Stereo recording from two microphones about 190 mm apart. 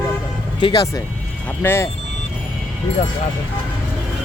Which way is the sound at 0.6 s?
20° left (ahead or behind).